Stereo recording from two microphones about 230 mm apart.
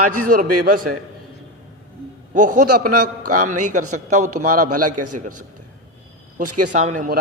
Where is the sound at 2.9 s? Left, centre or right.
Right.